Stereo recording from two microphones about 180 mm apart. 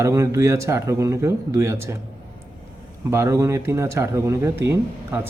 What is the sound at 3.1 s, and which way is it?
Speech, 15° right (ahead or behind).